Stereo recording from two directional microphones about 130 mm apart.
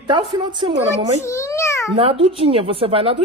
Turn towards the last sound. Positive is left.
turn(degrees=-45)  # may be behind; listen again after turning